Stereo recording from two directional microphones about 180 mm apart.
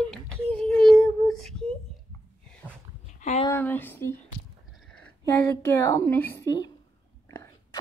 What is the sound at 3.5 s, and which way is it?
Speech, 10° left (ahead or behind).